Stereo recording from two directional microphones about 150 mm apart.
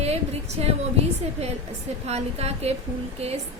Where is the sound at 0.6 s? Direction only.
45° right (ahead or behind).